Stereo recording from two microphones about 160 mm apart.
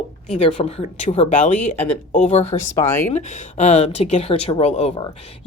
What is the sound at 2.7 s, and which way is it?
Speech, 15° left (ahead or behind).